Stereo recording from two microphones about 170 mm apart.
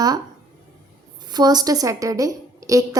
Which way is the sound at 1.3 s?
25° right (ahead or behind).